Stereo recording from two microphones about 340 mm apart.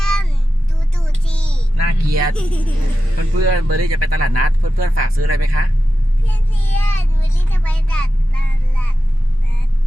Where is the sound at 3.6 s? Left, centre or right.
Right.